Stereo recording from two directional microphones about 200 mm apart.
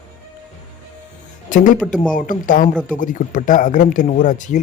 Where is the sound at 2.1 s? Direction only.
40° left (ahead or behind).